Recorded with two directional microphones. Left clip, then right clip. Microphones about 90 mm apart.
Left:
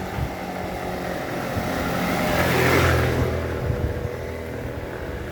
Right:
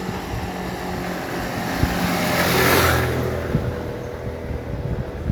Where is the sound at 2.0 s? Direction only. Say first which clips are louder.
Right 1 dB; 25° right (ahead or behind).